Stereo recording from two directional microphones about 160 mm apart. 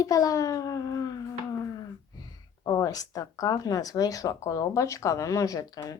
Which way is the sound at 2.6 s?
20° left (ahead or behind).